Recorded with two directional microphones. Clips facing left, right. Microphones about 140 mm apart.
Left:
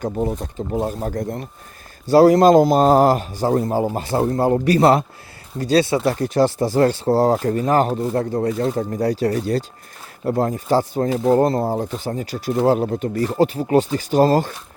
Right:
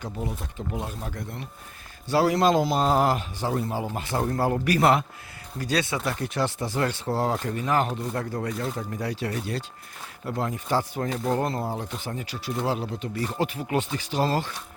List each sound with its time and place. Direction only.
0.0 s a man's voice: 45° left (ahead or behind)